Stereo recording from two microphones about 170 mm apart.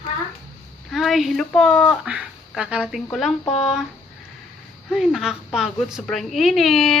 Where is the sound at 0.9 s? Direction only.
Centre (ahead or behind).